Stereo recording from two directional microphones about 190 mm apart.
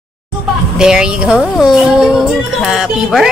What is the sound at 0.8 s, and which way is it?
A woman's voice, 5° right (ahead or behind).